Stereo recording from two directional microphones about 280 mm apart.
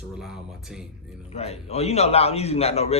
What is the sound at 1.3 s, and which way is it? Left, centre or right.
A man's voice, left.